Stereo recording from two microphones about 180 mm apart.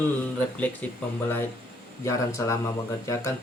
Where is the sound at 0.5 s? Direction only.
10° left (ahead or behind).